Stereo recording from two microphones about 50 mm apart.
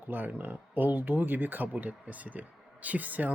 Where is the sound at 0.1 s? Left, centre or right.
Right.